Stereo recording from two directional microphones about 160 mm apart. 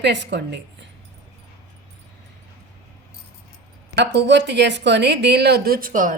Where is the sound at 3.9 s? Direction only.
90° right.